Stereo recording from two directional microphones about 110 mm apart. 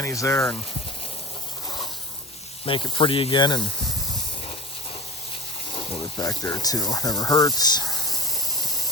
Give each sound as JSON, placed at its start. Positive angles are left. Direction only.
{"t": 0.0, "sound": "speech", "side_deg": 30}
{"t": 1.6, "sound": "a sound", "side_deg": 40}
{"t": 2.6, "sound": "speech", "side_deg": 50}
{"t": 5.7, "sound": "water", "side_deg": 50}
{"t": 6.0, "sound": "speech", "side_deg": 35}